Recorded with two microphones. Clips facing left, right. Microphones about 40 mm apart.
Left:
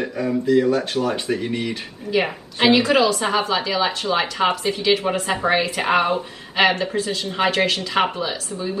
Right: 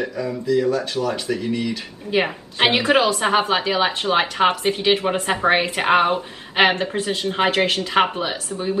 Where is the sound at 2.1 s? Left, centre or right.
Right.